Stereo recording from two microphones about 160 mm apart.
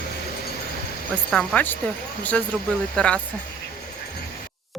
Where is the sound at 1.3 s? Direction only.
5° left (ahead or behind).